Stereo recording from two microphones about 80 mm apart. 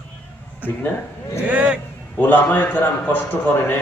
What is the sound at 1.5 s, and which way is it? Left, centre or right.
Speech, centre.